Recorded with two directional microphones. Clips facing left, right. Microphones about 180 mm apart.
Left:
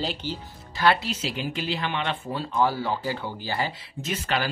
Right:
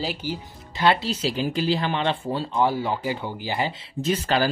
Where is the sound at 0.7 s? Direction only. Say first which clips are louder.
Right 2 dB; 20° right (ahead or behind).